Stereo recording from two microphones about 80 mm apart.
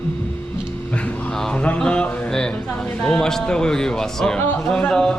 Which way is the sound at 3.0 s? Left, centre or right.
Centre.